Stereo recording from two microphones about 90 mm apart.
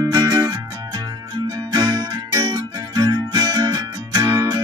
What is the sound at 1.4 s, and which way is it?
Music, 45° right (ahead or behind).